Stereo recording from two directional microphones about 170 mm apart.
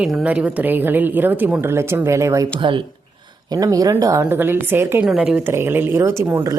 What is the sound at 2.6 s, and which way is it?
A woman's voice, 30° right (ahead or behind).